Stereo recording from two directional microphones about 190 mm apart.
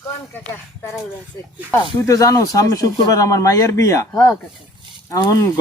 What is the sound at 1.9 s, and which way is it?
Speech, 15° left (ahead or behind).